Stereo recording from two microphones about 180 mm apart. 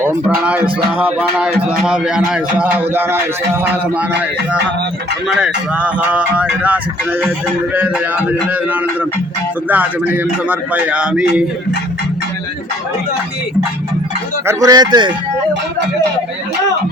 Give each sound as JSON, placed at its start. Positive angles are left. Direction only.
{"t": 0.0, "sound": "speech", "side_deg": -10}
{"t": 0.9, "sound": "music", "side_deg": -5}
{"t": 1.8, "sound": "speech", "side_deg": -5}
{"t": 5.3, "sound": "speech", "side_deg": -5}
{"t": 14.4, "sound": "speech", "side_deg": -20}